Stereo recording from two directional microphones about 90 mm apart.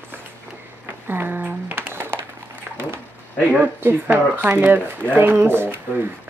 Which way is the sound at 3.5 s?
20° right (ahead or behind).